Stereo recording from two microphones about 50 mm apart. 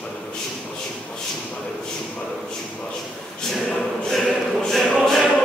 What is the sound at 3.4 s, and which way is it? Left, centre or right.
Choir, centre.